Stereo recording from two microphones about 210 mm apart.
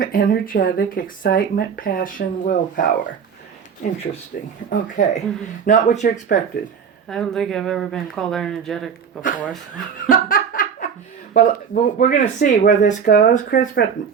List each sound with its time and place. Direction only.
0.0 s speech: 40° left (ahead or behind)
4.3 s speech: 45° left (ahead or behind)
4.7 s speech: 35° left (ahead or behind)
7.1 s speech: 5° left (ahead or behind)
9.7 s laughter: 40° left (ahead or behind)
11.3 s speech: 40° left (ahead or behind)